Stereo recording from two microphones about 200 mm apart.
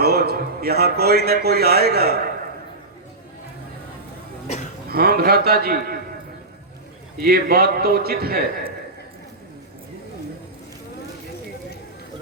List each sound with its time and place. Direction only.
0.0 s a man's voice: 50° right (ahead or behind)
4.9 s a man's voice: 50° right (ahead or behind)
7.2 s a man's voice: 50° right (ahead or behind)